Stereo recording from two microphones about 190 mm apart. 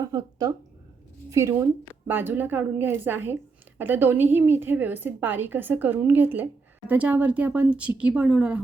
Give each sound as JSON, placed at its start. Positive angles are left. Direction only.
{"t": 0.0, "sound": "a woman's voice", "side_deg": -20}